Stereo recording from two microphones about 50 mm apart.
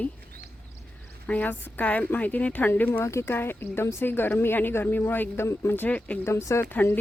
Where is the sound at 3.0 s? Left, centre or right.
Left.